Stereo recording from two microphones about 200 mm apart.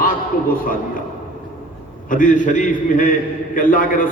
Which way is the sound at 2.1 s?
40° left (ahead or behind).